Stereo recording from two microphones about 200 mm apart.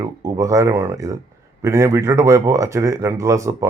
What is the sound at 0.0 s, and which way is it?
Speech, 15° right (ahead or behind).